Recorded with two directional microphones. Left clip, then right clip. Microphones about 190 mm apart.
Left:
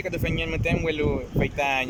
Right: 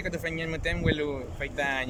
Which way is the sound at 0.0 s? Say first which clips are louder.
Left 4 dB; 5° left (ahead or behind).